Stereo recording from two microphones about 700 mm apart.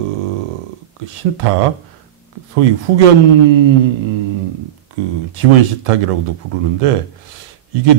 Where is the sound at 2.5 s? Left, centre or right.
Right.